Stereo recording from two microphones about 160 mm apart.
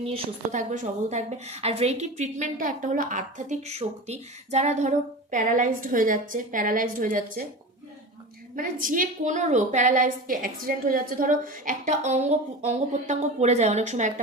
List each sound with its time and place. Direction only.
0.0 s a woman's voice: 35° right (ahead or behind)
0.5 s a woman's voice: 50° right (ahead or behind)
8.5 s a woman's voice: 60° right (ahead or behind)